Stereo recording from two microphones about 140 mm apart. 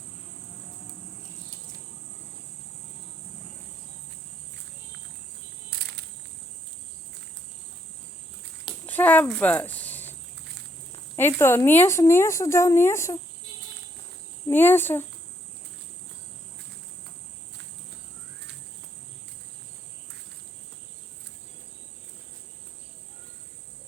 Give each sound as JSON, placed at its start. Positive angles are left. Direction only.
{"t": 5.7, "sound": "insect", "side_deg": -90}
{"t": 8.9, "sound": "speech", "side_deg": 10}
{"t": 11.2, "sound": "speech", "side_deg": 15}
{"t": 14.4, "sound": "speech", "side_deg": 15}